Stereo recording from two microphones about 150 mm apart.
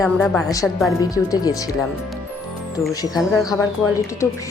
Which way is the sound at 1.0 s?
25° left (ahead or behind).